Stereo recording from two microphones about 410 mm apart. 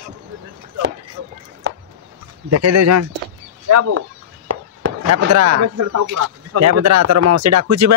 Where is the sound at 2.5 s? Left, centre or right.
Right.